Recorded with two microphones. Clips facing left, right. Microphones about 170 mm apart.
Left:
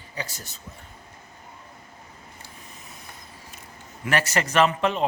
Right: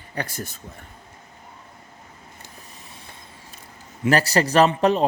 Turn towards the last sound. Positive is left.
turn(degrees=-35)  # may be behind; listen again after turning